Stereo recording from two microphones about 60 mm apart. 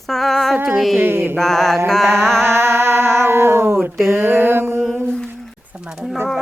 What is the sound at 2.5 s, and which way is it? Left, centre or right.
Music, right.